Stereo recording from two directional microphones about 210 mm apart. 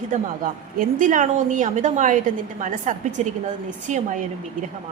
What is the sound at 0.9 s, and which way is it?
A woman's voice, 40° right (ahead or behind).